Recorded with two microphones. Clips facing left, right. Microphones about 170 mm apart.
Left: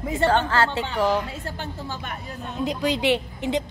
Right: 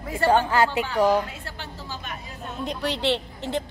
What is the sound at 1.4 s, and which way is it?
Speech, 50° left (ahead or behind).